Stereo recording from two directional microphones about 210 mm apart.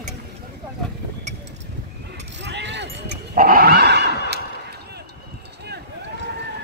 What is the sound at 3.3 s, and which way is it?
Dog, 40° right (ahead or behind).